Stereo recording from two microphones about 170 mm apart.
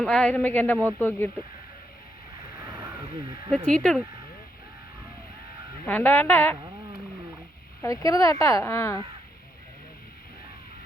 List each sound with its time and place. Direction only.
0.0 s speech: 5° left (ahead or behind)
0.8 s speech: 10° right (ahead or behind)
3.7 s speech: 5° left (ahead or behind)
5.8 s speech: 10° left (ahead or behind)
7.8 s speech: 20° left (ahead or behind)